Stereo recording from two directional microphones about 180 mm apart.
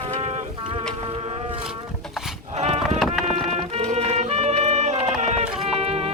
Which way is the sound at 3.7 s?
40° right (ahead or behind).